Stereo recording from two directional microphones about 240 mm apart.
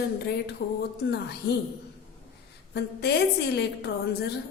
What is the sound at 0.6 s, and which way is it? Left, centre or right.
Speech, left.